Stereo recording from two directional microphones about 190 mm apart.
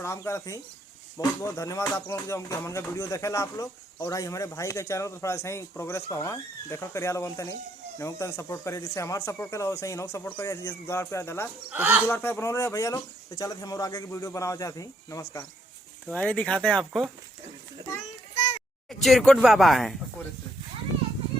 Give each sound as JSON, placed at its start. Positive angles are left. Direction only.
{"t": 0.0, "sound": "speech", "side_deg": 15}
{"t": 11.7, "sound": "speech", "side_deg": -10}
{"t": 12.0, "sound": "speech", "side_deg": 10}
{"t": 18.9, "sound": "speech", "side_deg": 0}